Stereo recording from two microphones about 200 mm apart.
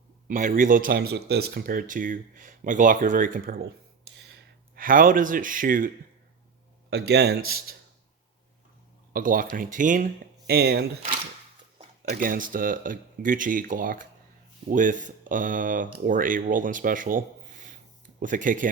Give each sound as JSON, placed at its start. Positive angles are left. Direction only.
{"t": 0.3, "sound": "speech", "side_deg": -40}
{"t": 4.7, "sound": "speech", "side_deg": -45}
{"t": 6.9, "sound": "speech", "side_deg": -55}
{"t": 9.1, "sound": "speech", "side_deg": -45}